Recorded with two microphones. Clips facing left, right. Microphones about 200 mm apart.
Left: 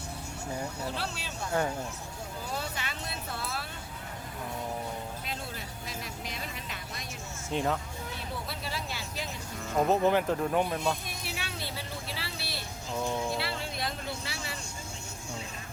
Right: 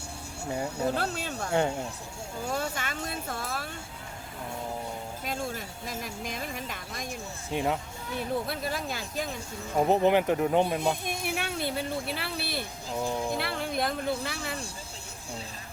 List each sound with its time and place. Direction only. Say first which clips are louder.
0.9 s speech: right 7 dB; 45° right (ahead or behind)
1.5 s speech: right 3 dB; 25° right (ahead or behind)
2.5 s speech: right 5 dB; 45° right (ahead or behind)
5.2 s speech: right 6 dB; 45° right (ahead or behind)
7.5 s speech: right 1 dB; 15° right (ahead or behind)
8.4 s speech: right 5 dB; 50° right (ahead or behind)
9.7 s speech: right 2 dB; 15° right (ahead or behind)
11.0 s speech: right 7 dB; 50° right (ahead or behind)
12.9 s speech: right 1 dB; 15° right (ahead or behind)
13.3 s speech: right 4 dB; 55° right (ahead or behind)